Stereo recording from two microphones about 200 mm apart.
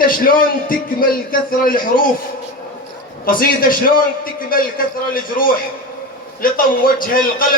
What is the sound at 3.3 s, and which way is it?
A man's voice, 45° left (ahead or behind).